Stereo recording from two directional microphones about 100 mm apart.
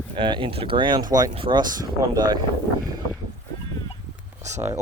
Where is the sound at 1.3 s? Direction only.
60° right (ahead or behind).